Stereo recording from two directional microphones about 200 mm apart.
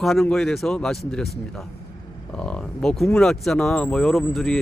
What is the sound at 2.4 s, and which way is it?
A man's voice, 5° left (ahead or behind).